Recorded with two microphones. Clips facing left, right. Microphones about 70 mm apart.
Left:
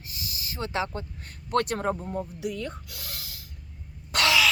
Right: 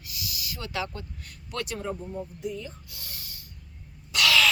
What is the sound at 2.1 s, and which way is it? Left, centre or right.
Speech, left.